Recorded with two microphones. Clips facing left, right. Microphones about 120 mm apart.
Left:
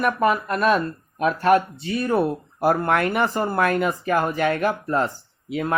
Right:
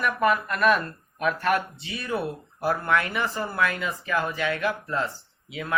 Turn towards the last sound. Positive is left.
turn(degrees=45)  # may be behind; listen again after turning